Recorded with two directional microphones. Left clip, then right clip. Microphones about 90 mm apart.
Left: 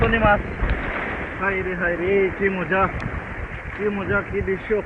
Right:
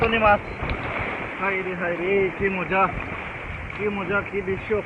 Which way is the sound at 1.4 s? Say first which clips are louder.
Left 3 dB; centre (ahead or behind).